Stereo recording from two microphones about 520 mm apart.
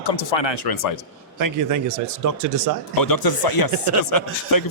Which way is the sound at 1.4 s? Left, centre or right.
Right.